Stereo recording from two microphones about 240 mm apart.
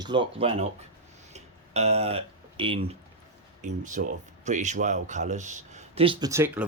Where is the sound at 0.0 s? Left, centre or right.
Centre.